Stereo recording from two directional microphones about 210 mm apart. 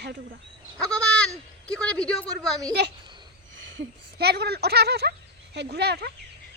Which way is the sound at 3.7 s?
50° right (ahead or behind).